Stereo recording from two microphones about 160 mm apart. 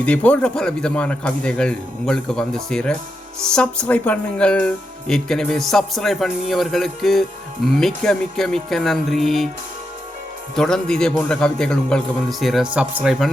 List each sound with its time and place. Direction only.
0.0 s speech: 10° left (ahead or behind)
10.5 s speech: 5° left (ahead or behind)